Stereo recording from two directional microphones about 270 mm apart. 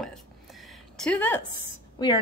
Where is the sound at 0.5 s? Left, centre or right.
Centre.